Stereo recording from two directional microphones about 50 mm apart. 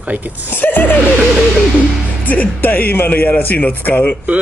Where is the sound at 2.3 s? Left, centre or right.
Left.